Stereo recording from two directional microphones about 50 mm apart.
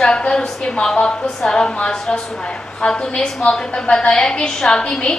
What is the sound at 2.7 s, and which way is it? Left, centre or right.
A woman's voice, centre.